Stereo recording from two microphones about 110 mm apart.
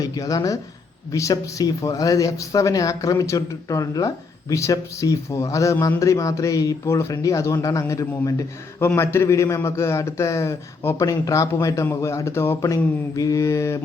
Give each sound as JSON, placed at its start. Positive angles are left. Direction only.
{"t": 0.0, "sound": "speech", "side_deg": 30}